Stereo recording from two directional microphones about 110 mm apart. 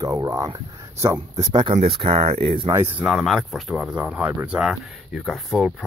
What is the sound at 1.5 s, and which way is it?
Speech, 50° right (ahead or behind).